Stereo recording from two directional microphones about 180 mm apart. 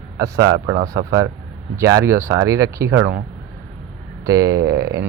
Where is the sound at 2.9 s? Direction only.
75° right (ahead or behind).